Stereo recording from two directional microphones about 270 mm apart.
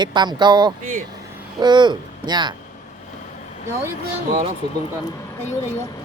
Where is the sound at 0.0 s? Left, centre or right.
Centre.